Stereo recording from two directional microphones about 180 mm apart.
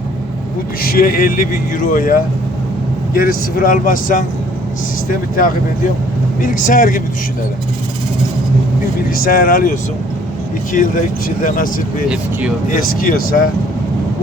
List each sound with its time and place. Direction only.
0.8 s a man's voice: 55° left (ahead or behind)
6.4 s a man's voice: 50° left (ahead or behind)
9.0 s a man's voice: 50° left (ahead or behind)